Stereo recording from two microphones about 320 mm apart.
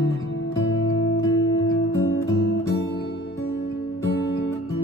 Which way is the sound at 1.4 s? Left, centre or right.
Left.